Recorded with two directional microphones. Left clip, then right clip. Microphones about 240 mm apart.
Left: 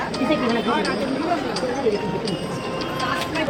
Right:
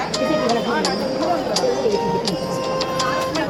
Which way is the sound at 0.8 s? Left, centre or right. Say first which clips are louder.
Right 3 dB; right.